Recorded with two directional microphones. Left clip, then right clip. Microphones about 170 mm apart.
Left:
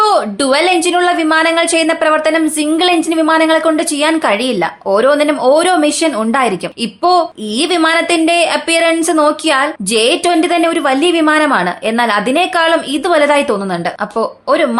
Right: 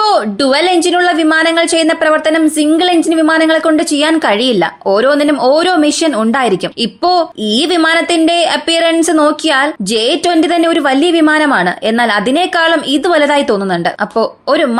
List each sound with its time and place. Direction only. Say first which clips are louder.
0.0 s speech: right 1 dB; 20° right (ahead or behind)